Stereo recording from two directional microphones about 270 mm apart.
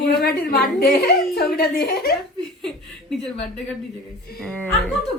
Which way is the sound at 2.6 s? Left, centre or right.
Centre.